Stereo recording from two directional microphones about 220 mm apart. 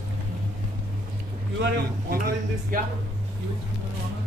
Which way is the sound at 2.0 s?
40° right (ahead or behind).